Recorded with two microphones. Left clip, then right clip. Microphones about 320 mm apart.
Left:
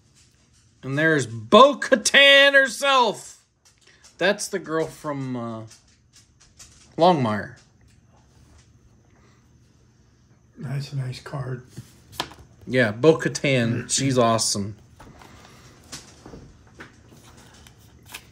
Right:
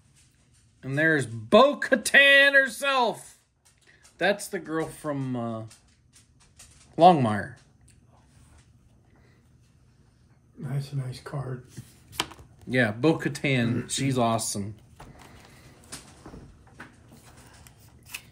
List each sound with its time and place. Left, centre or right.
0.7 s speech: centre
7.0 s speech: centre
10.8 s speech: left
11.7 s speech: centre